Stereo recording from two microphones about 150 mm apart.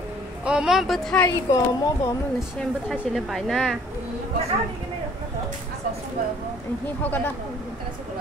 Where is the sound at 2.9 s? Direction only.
Centre (ahead or behind).